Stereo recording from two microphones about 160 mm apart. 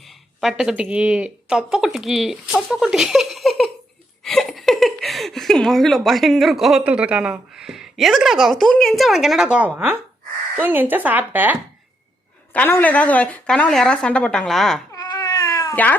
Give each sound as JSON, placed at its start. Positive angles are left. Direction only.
{"t": 0.3, "sound": "a woman's voice", "side_deg": 0}
{"t": 12.5, "sound": "a woman's voice", "side_deg": 10}
{"t": 14.9, "sound": "cat", "side_deg": 20}